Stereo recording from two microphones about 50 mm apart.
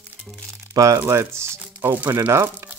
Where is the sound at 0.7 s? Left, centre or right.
Right.